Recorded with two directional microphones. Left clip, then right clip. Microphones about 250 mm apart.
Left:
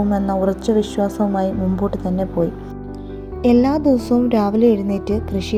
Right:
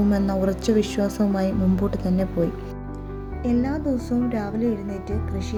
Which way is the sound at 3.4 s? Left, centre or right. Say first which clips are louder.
Left 10 dB; left.